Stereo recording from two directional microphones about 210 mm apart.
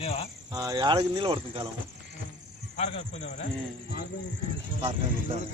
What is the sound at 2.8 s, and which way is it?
Speech, 30° left (ahead or behind).